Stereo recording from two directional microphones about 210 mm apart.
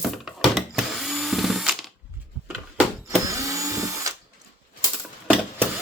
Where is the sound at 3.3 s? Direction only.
15° right (ahead or behind).